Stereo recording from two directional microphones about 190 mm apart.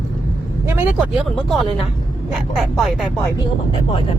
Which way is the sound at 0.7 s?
10° right (ahead or behind).